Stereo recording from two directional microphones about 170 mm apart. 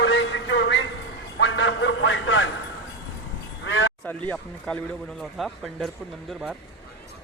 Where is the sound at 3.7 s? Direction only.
90° left.